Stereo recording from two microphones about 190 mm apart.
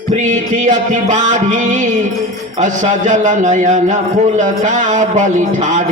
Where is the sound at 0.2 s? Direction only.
40° right (ahead or behind).